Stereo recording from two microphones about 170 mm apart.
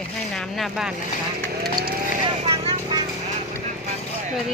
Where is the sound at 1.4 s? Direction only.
70° right (ahead or behind).